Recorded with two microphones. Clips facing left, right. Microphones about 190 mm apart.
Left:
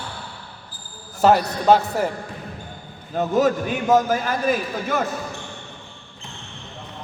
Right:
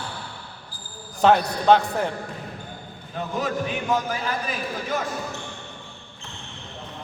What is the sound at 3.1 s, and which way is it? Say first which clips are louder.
A man's voice: left 8 dB; 45° left (ahead or behind).